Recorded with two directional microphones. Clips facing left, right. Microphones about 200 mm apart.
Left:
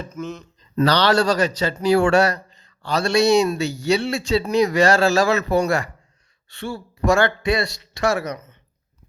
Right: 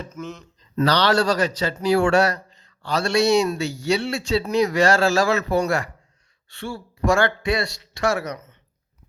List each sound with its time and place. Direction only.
0.1 s speech: 15° left (ahead or behind)
0.9 s speech: 25° left (ahead or behind)